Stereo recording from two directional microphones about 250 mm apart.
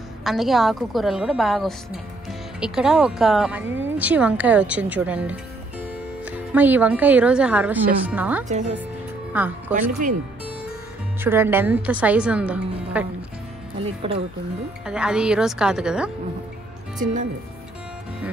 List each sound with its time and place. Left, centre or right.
0.2 s a woman's voice: centre
8.5 s a woman's voice: right
9.3 s speech: centre
11.2 s a woman's voice: centre
14.9 s a woman's voice: centre
17.0 s speech: right